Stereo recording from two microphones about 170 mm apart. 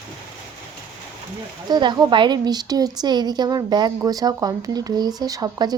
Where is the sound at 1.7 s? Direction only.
25° right (ahead or behind).